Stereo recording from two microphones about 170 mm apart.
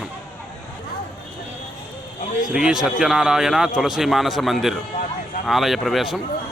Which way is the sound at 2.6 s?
5° right (ahead or behind).